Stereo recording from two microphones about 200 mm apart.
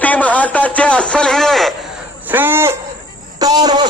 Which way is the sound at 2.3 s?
10° right (ahead or behind).